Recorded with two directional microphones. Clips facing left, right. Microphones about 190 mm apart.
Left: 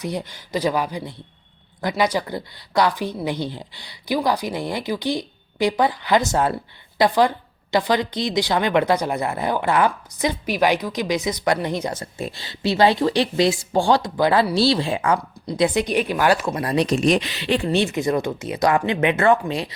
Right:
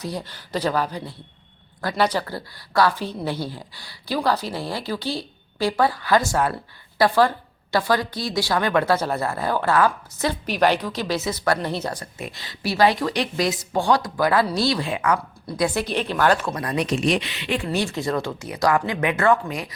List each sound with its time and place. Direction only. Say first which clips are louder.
0.0 s a woman's voice: left 3 dB; 20° left (ahead or behind)
16.6 s a woman's voice: left 4 dB; 30° left (ahead or behind)